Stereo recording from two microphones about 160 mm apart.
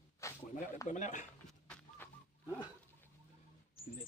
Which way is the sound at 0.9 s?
50° left (ahead or behind).